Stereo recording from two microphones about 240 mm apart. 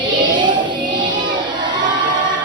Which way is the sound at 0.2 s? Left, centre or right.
Centre.